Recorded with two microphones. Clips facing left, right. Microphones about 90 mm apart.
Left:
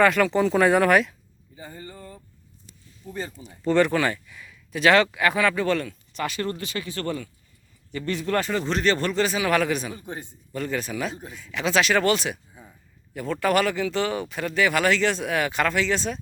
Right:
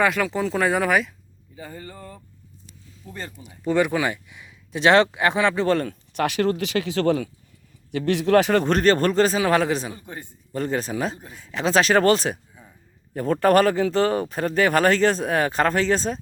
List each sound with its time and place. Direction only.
0.0 s speech: 5° right (ahead or behind)
3.0 s speech: 5° left (ahead or behind)
3.3 s speech: 10° right (ahead or behind); by 6.0 s 40° right (ahead or behind)
6.1 s speech: 70° right (ahead or behind); by 7.3 s 90° right
7.9 s speech: 70° right (ahead or behind)
8.6 s speech: 45° right (ahead or behind); by 9.9 s 30° right (ahead or behind)
9.9 s a man's voice: 20° left (ahead or behind)
10.5 s speech: 30° right (ahead or behind)